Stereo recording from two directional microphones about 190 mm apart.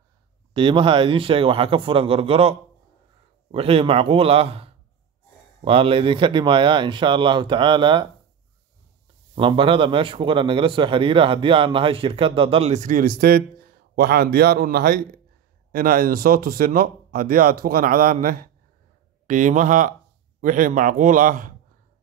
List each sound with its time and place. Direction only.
0.5 s a man's voice: 25° right (ahead or behind)
3.5 s a man's voice: 30° right (ahead or behind)
9.3 s a man's voice: 25° right (ahead or behind); by 21.5 s 45° right (ahead or behind)